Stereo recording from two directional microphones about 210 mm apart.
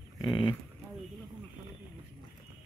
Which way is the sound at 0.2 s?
20° left (ahead or behind).